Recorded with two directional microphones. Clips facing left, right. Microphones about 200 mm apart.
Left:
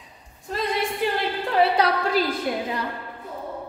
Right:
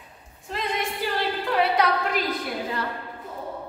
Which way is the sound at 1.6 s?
30° left (ahead or behind).